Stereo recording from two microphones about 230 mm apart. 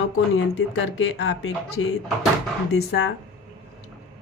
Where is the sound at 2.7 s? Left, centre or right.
Left.